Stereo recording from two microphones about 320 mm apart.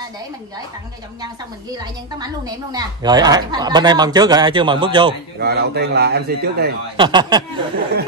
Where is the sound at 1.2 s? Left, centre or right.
Centre.